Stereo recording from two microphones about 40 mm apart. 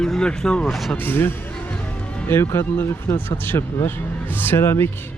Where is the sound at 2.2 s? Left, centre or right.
Left.